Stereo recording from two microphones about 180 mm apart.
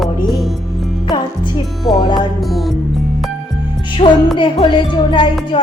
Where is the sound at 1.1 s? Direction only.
25° left (ahead or behind).